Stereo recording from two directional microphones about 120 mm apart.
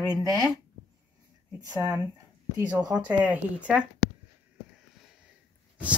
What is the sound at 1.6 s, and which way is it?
Speech, 30° right (ahead or behind).